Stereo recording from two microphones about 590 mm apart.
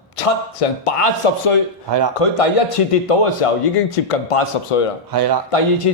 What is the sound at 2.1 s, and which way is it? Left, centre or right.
A man's voice, left.